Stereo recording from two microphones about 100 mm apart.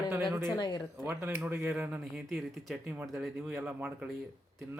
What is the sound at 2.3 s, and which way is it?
Speech, centre (ahead or behind).